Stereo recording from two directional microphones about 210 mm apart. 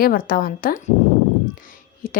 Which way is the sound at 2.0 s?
40° left (ahead or behind).